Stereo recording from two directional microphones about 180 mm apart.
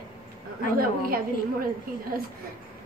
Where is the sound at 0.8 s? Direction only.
55° right (ahead or behind).